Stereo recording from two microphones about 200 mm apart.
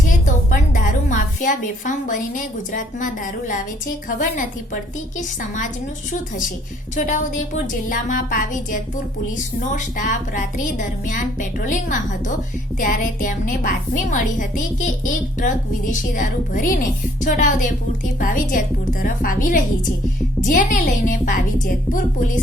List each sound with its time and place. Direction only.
0.1 s a sound: 40° left (ahead or behind)
4.2 s a woman's voice: 40° left (ahead or behind)
6.9 s a woman's voice: 40° left (ahead or behind)